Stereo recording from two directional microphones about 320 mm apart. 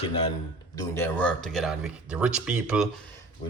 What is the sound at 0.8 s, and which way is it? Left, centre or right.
Speech, centre.